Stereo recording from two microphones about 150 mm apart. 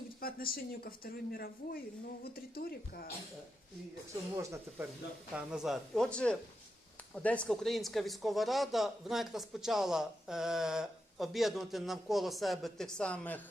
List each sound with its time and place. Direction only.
0.2 s speech: 80° left
5.3 s speech: 5° right (ahead or behind); by 13.4 s 10° left (ahead or behind)